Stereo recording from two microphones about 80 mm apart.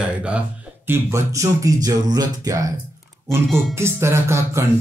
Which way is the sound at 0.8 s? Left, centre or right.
Right.